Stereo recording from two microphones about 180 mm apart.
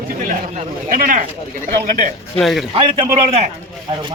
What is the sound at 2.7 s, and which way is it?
Speech, 30° right (ahead or behind).